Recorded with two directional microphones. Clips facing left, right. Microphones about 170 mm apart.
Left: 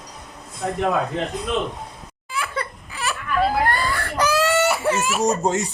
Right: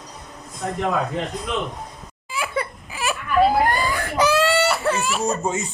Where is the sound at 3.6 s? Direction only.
10° right (ahead or behind).